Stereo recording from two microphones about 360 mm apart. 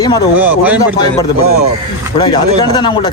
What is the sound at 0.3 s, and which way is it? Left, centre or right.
Speech, centre.